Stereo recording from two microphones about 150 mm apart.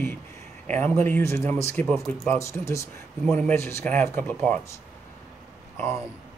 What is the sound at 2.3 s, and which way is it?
Speech, 20° left (ahead or behind).